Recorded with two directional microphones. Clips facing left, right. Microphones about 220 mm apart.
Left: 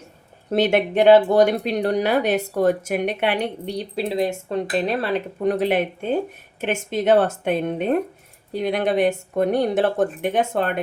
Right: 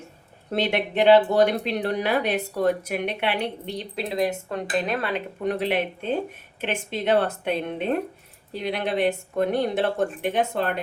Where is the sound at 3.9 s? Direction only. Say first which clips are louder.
Left 2 dB; 30° left (ahead or behind).